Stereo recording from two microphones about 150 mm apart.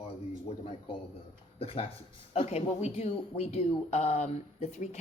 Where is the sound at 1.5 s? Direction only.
40° left (ahead or behind).